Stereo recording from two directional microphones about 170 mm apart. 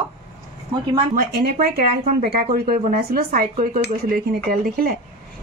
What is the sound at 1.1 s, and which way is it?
Speech, 60° right (ahead or behind).